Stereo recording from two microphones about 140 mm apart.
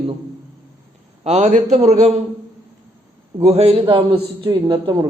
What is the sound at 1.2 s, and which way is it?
Speech, 55° right (ahead or behind).